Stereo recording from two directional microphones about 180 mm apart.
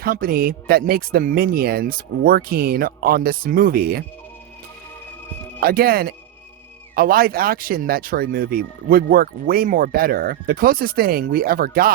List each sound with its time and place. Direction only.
0.0 s speech: 55° right (ahead or behind)
5.5 s speech: 55° right (ahead or behind)